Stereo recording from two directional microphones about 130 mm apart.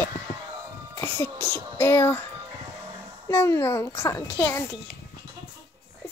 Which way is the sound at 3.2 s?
20° left (ahead or behind).